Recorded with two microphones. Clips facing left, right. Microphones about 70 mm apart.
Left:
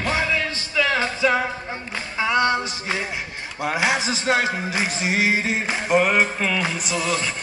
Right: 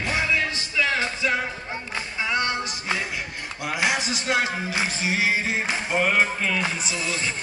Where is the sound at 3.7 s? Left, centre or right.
Left.